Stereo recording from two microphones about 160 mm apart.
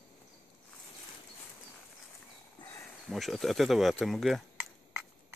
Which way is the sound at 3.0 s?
Centre (ahead or behind).